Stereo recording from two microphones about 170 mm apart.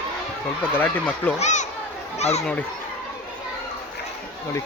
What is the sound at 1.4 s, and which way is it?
Speech, 45° left (ahead or behind).